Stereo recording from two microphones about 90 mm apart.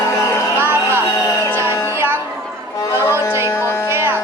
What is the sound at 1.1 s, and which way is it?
Music, 40° left (ahead or behind).